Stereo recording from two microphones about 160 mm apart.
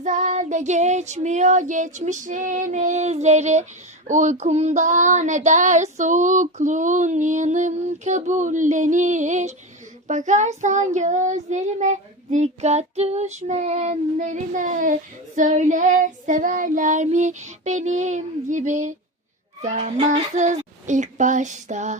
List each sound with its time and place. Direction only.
0.0 s child singing: 50° right (ahead or behind)